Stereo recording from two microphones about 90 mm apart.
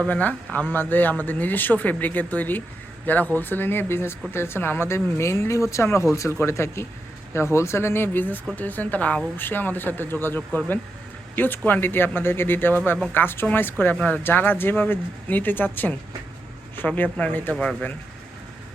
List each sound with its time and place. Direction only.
0.1 s speech: 20° left (ahead or behind)
17.5 s speech: 5° left (ahead or behind)